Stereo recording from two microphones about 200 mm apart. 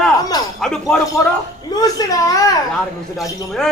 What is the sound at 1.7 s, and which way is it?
Speech, 20° left (ahead or behind).